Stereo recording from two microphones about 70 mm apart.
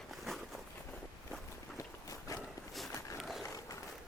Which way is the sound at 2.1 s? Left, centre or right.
Left.